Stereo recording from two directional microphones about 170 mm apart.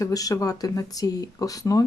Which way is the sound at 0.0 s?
20° left (ahead or behind).